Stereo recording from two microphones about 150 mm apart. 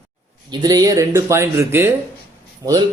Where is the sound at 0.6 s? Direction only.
25° right (ahead or behind).